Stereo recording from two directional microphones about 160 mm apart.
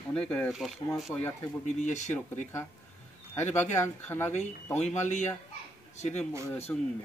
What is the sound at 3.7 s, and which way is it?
Speech, 15° left (ahead or behind).